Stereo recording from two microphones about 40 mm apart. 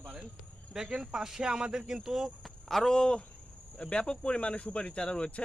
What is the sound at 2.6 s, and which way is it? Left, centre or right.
Speech, centre.